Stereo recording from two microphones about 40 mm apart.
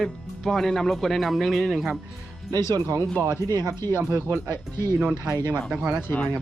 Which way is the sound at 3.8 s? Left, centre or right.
Left.